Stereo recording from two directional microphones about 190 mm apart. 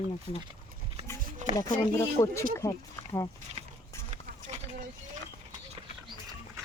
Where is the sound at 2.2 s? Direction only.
15° left (ahead or behind).